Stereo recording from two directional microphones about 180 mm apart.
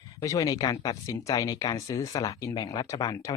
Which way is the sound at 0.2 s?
20° left (ahead or behind).